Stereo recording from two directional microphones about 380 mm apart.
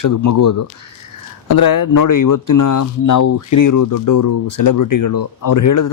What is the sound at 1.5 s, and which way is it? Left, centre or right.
Speech, left.